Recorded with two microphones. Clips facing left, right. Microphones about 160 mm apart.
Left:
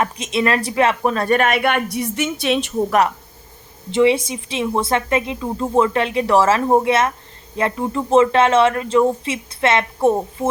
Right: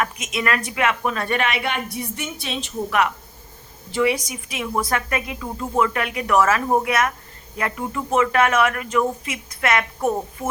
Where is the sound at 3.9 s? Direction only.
25° left (ahead or behind).